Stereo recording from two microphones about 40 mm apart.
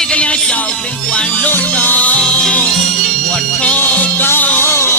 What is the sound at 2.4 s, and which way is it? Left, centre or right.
Music, centre.